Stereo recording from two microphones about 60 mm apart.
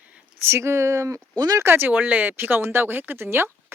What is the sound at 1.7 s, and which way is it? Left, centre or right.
Speech, right.